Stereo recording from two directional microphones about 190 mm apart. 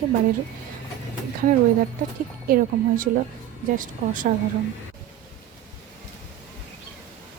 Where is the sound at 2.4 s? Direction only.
50° right (ahead or behind).